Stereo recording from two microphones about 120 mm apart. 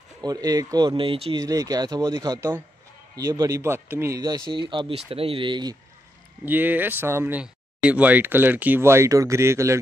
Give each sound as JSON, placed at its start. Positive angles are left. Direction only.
{"t": 0.2, "sound": "speech", "side_deg": -30}
{"t": 1.4, "sound": "speech", "side_deg": -30}
{"t": 4.2, "sound": "speech", "side_deg": -40}
{"t": 6.4, "sound": "speech", "side_deg": -15}